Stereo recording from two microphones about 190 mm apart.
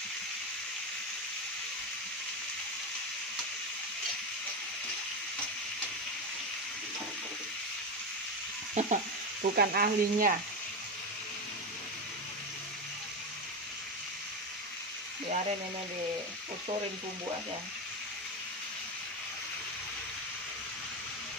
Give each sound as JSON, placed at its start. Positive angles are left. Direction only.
{"t": 8.7, "sound": "sizzle", "side_deg": -40}
{"t": 9.6, "sound": "speech", "side_deg": -50}